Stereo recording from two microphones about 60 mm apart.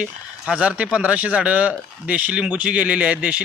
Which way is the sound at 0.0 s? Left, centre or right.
Centre.